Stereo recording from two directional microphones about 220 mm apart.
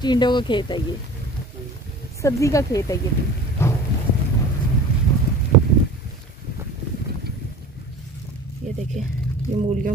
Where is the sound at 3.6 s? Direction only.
10° left (ahead or behind).